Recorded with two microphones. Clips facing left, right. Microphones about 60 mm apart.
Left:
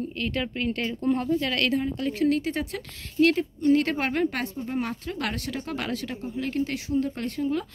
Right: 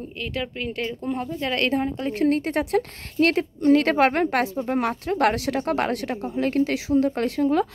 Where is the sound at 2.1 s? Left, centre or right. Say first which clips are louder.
Right 3 dB; right.